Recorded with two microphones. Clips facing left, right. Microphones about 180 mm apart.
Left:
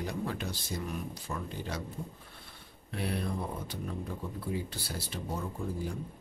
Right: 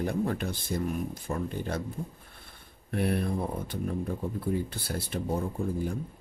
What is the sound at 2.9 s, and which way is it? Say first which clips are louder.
Speech: right 6 dB; 55° right (ahead or behind).